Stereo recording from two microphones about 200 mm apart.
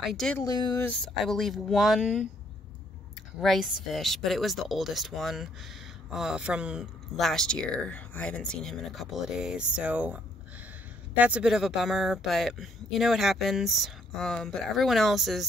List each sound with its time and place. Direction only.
0.0 s speech: centre (ahead or behind)
0.4 s speech: 20° left (ahead or behind)
0.8 s speech: centre (ahead or behind)
3.3 s speech: centre (ahead or behind)